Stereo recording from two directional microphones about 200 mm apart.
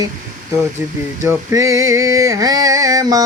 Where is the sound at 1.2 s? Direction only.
15° right (ahead or behind).